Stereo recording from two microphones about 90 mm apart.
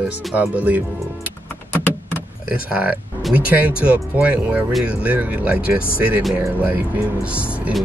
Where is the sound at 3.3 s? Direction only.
15° right (ahead or behind).